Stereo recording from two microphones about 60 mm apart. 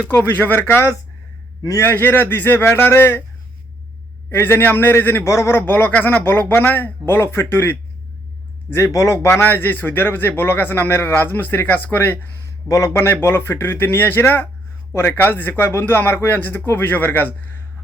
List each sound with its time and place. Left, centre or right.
0.1 s a man's voice: left
4.3 s a man's voice: left
5.2 s a man's voice: left
8.7 s speech: left
9.4 s a man's voice: left
12.6 s speech: left
12.9 s a man's voice: left
13.6 s a man's voice: left